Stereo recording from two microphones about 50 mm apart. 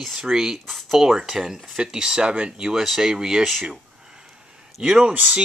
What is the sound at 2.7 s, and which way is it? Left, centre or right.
Speech, centre.